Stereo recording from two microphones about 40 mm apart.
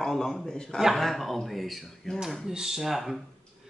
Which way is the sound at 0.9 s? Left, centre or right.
Centre.